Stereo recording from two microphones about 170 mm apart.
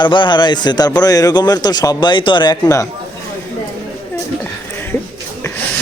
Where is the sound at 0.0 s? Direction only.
25° left (ahead or behind).